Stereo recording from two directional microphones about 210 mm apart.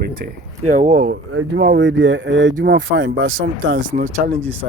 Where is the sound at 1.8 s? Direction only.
60° right (ahead or behind).